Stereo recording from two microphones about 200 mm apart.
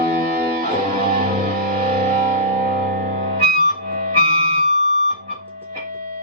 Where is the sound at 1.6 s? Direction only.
45° right (ahead or behind).